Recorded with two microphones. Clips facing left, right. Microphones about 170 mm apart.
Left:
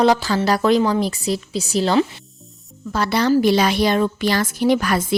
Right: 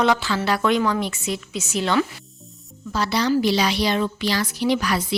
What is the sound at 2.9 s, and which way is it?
A woman's voice, 55° left (ahead or behind).